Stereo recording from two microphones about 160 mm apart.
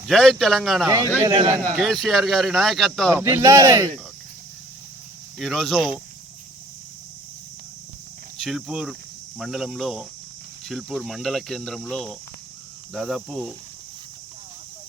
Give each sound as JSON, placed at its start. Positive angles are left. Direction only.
{"t": 0.0, "sound": "speech", "side_deg": 0}
{"t": 1.3, "sound": "a man's voice", "side_deg": -30}
{"t": 1.7, "sound": "speech", "side_deg": 0}
{"t": 3.1, "sound": "speech", "side_deg": -15}
{"t": 5.4, "sound": "speech", "side_deg": 0}
{"t": 8.4, "sound": "speech", "side_deg": 0}